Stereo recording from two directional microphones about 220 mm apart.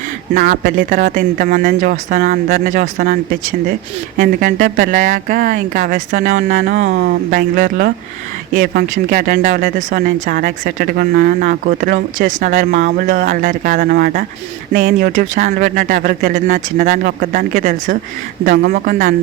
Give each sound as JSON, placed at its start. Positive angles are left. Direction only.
{"t": 0.3, "sound": "speech", "side_deg": -40}
{"t": 4.2, "sound": "speech", "side_deg": -40}
{"t": 6.9, "sound": "speech", "side_deg": -45}